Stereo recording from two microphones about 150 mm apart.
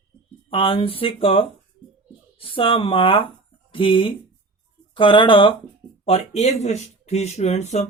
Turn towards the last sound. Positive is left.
turn(degrees=50)  # may be behind; listen again after turning